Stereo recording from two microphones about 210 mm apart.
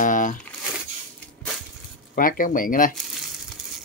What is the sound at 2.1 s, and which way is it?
Speech, 40° left (ahead or behind).